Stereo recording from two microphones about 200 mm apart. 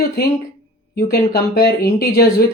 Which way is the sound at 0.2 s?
55° left (ahead or behind).